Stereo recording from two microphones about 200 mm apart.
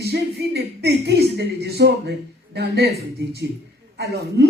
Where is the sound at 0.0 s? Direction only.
55° right (ahead or behind).